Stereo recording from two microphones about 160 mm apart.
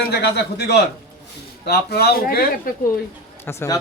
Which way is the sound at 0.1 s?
90° left.